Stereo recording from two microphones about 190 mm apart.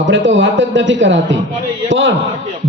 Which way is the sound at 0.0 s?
75° right (ahead or behind).